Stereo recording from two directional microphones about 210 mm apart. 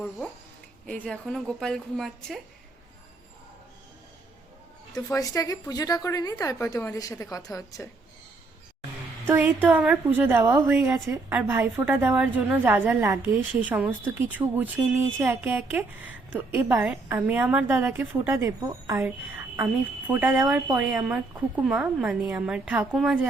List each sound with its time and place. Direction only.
0.9 s a woman's voice: 5° left (ahead or behind)
5.0 s a woman's voice: 15° left (ahead or behind)
9.2 s a woman's voice: 10° right (ahead or behind)